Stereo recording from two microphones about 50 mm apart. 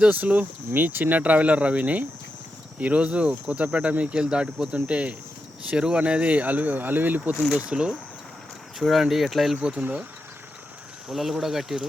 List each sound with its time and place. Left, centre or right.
0.1 s speech: right
7.6 s speech: centre
8.8 s speech: centre
9.6 s speech: right
11.1 s speech: centre